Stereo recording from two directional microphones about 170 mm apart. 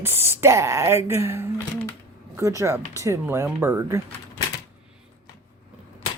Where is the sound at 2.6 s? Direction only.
20° right (ahead or behind).